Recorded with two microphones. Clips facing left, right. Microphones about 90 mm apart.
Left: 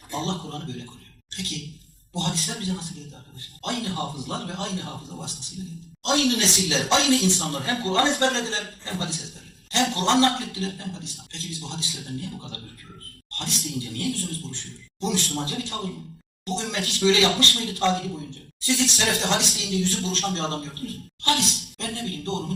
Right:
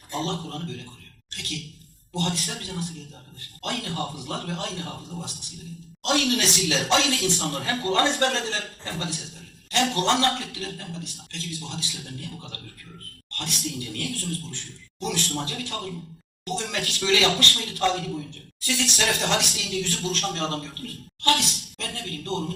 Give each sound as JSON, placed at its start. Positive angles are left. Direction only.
{"t": 0.1, "sound": "speech", "side_deg": 25}
{"t": 1.3, "sound": "a sound", "side_deg": 25}
{"t": 2.1, "sound": "speech", "side_deg": 25}